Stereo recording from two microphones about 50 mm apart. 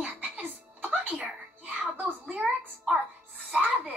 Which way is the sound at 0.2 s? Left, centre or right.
Right.